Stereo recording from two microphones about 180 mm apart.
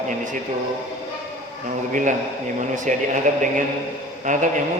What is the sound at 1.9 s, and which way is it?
A man's voice, 45° right (ahead or behind).